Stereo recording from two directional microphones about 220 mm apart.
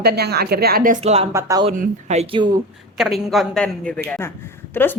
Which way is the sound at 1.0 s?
30° right (ahead or behind).